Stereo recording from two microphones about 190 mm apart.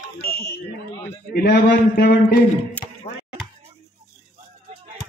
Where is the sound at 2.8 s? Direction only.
5° left (ahead or behind).